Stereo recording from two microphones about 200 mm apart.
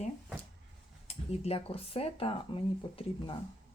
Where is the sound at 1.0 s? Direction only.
30° left (ahead or behind).